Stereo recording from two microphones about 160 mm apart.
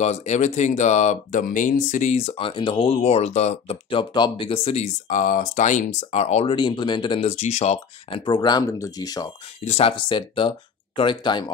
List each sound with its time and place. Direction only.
0.0 s speech: 45° left (ahead or behind)
8.3 s speech: 25° left (ahead or behind)
9.7 s speech: 35° left (ahead or behind)